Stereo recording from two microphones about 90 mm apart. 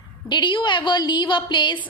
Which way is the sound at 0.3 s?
60° left (ahead or behind).